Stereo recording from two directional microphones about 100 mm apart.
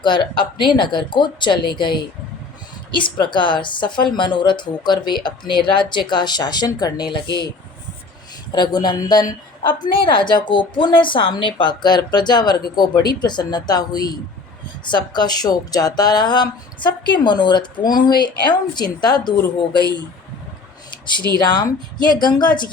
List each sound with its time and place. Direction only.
0.0 s a woman's voice: 50° left (ahead or behind)
8.5 s a woman's voice: 45° left (ahead or behind)
21.3 s a woman's voice: 45° left (ahead or behind)